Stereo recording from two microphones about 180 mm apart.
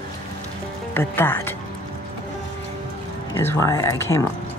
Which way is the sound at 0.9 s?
10° left (ahead or behind).